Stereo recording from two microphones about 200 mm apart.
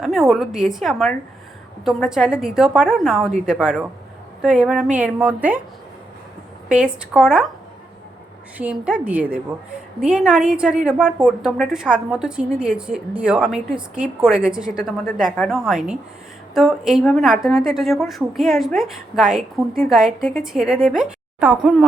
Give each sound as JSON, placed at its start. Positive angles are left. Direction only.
{"t": 0.0, "sound": "a woman's voice", "side_deg": 0}
{"t": 6.7, "sound": "a woman's voice", "side_deg": -5}
{"t": 8.5, "sound": "a woman's voice", "side_deg": -5}